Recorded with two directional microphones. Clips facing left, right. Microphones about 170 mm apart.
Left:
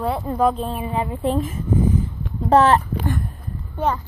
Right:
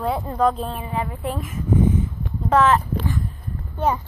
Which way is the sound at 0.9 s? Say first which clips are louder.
Left 6 dB; 25° left (ahead or behind).